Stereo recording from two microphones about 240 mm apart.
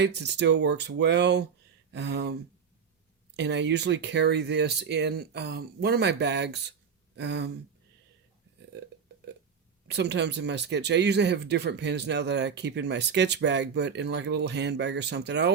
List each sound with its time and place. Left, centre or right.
0.0 s speech: right
3.3 s speech: right
9.8 s speech: right